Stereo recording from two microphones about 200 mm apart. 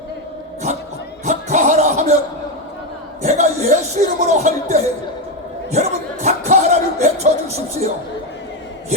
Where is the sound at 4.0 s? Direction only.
35° right (ahead or behind).